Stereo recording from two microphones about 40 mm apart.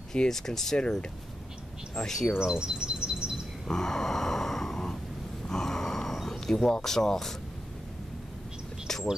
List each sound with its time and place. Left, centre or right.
0.1 s speech: centre
2.0 s speech: centre
2.4 s bird: right
3.6 s a sound: centre